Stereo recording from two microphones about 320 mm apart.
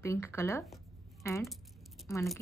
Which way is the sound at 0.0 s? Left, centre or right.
Centre.